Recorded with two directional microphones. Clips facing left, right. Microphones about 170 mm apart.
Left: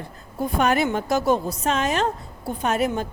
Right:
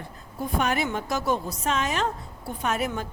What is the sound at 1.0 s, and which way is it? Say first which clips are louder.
Speech: left 6 dB; 35° left (ahead or behind).